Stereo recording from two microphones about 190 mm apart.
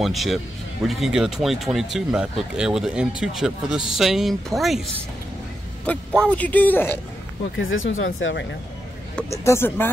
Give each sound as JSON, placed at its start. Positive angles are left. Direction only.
{"t": 0.0, "sound": "speech", "side_deg": 0}
{"t": 7.5, "sound": "speech", "side_deg": 90}
{"t": 9.3, "sound": "speech", "side_deg": 15}